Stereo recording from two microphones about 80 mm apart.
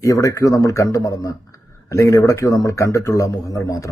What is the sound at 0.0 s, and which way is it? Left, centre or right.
Speech, left.